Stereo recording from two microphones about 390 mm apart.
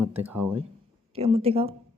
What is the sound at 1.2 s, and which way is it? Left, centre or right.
Speech, centre.